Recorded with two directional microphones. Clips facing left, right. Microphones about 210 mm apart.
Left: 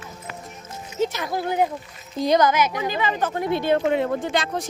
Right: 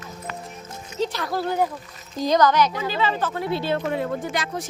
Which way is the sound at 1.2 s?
15° left (ahead or behind).